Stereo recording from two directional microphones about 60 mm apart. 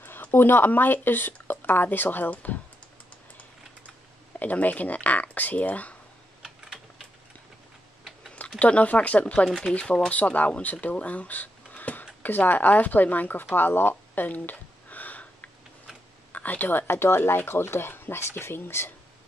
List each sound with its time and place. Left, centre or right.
0.0 s speech: left
4.4 s speech: left
8.5 s speech: left
10.0 s speech: left
13.6 s a sound: left
16.3 s speech: left